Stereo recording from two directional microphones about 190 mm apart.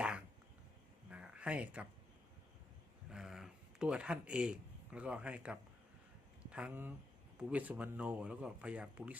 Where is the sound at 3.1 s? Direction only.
Centre (ahead or behind).